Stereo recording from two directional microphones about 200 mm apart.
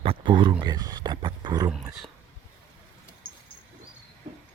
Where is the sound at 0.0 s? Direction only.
25° right (ahead or behind).